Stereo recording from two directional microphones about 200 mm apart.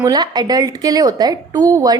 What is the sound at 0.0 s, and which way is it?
A woman's voice, 20° right (ahead or behind).